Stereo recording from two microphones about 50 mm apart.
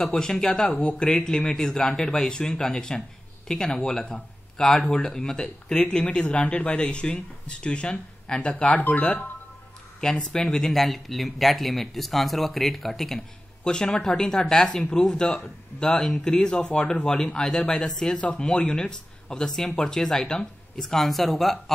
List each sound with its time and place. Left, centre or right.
0.0 s speech: centre
10.3 s speech: centre
13.7 s speech: centre